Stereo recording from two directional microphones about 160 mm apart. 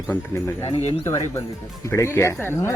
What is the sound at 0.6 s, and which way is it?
Speech, 40° left (ahead or behind).